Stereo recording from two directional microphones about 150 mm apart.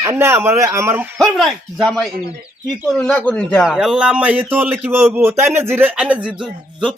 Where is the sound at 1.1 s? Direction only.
Centre (ahead or behind).